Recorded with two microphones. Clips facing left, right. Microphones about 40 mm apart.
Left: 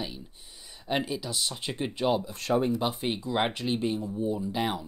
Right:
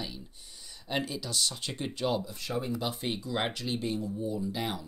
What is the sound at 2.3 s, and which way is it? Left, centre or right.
Speech, left.